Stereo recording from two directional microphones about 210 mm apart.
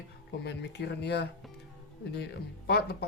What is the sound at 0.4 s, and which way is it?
Speech, 55° left (ahead or behind).